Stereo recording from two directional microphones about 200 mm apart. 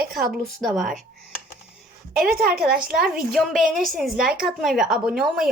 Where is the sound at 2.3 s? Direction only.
50° right (ahead or behind).